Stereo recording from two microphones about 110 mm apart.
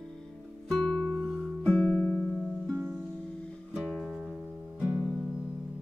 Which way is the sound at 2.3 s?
10° right (ahead or behind).